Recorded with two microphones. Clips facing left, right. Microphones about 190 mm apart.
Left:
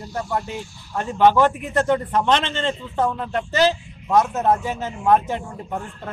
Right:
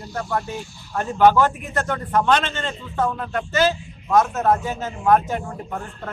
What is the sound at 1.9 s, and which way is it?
A man's voice, 25° left (ahead or behind).